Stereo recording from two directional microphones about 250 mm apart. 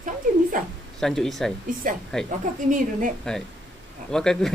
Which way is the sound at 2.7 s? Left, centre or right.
Right.